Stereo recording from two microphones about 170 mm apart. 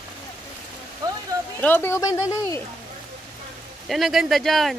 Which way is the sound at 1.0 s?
20° right (ahead or behind).